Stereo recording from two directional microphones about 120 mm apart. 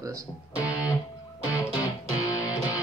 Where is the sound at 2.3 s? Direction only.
30° left (ahead or behind).